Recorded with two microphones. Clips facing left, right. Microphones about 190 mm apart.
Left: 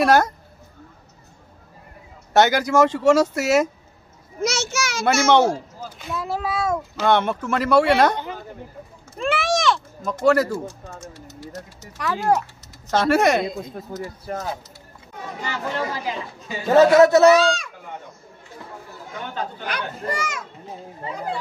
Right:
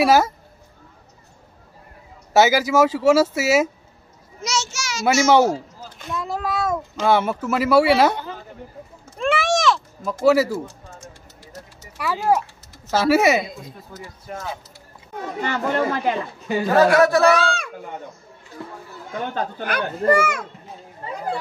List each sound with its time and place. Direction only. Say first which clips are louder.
0.0 s speech: right 1 dB; 5° right (ahead or behind)
2.3 s speech: right 1 dB; 5° right (ahead or behind)
4.4 s a sound: left 3 dB; 55° left (ahead or behind)
5.3 s a man's voice: even; 5° right (ahead or behind)
9.1 s a sound: right 2 dB; centre (ahead or behind)
12.0 s speech: right 1 dB; 5° right (ahead or behind)
13.9 s speech: left 8 dB; 45° left (ahead or behind)
15.4 s speech: right 5 dB; 55° right (ahead or behind)
16.7 s speech: left 3 dB; 20° left (ahead or behind)
17.3 s speech: left 3 dB; 55° right (ahead or behind)
19.6 s speech: right 7 dB; 55° right (ahead or behind)